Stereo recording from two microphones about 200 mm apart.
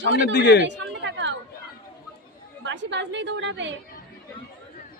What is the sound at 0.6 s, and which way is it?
Chatter, 60° right (ahead or behind).